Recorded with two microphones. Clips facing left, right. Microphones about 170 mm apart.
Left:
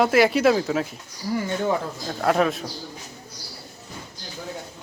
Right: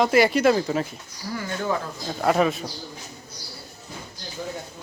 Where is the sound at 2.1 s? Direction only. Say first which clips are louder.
Even; centre (ahead or behind).